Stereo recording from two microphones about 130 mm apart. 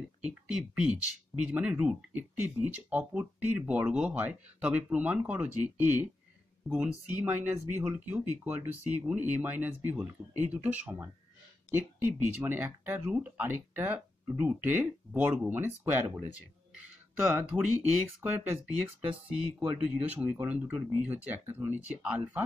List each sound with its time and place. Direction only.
0.2 s speech: 10° right (ahead or behind)
18.2 s speech: 15° right (ahead or behind)